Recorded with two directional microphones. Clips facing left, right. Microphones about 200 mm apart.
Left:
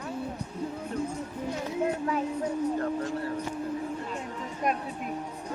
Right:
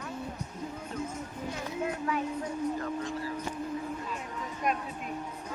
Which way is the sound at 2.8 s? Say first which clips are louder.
Left 4 dB; 55° left (ahead or behind).